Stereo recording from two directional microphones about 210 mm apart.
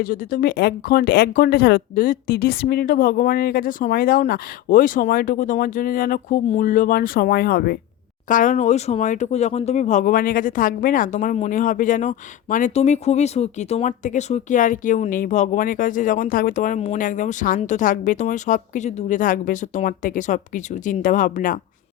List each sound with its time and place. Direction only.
0.0 s speech: 40° left (ahead or behind)